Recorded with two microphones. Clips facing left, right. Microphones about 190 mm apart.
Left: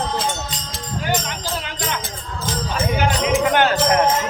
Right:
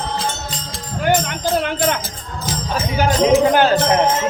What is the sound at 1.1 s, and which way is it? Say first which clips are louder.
Music: right 8 dB; 55° right (ahead or behind).